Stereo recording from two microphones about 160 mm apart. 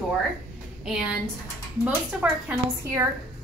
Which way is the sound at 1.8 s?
10° right (ahead or behind).